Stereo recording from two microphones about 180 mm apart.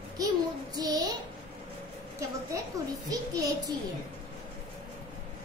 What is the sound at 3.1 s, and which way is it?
Speech, 20° right (ahead or behind).